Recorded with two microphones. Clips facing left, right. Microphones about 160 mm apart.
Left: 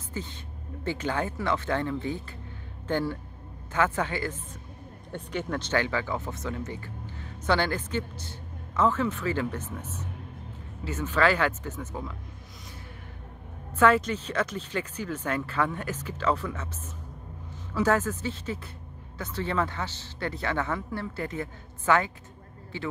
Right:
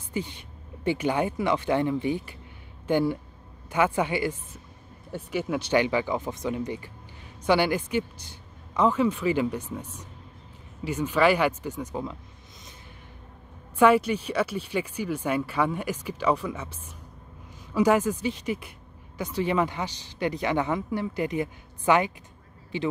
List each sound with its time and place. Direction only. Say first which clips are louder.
0.1 s speech: right 5 dB; 15° right (ahead or behind)
13.7 s speech: right 3 dB; 15° right (ahead or behind)
17.7 s speech: right 3 dB; 15° right (ahead or behind)